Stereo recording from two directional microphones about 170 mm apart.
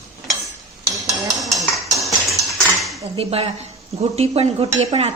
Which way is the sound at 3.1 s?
35° right (ahead or behind).